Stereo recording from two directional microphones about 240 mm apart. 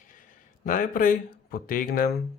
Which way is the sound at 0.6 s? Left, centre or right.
Left.